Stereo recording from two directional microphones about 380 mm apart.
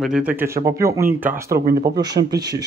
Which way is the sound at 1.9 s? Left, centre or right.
Centre.